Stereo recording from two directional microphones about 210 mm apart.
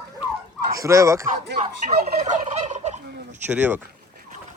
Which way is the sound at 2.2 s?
35° right (ahead or behind).